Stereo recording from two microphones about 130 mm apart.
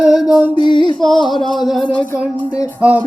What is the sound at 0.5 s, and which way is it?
Music, 40° left (ahead or behind).